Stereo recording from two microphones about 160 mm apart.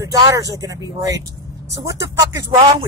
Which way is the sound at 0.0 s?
20° right (ahead or behind).